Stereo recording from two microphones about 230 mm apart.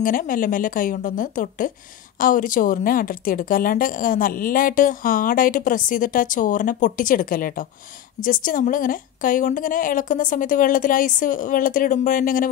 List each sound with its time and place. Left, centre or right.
0.0 s speech: left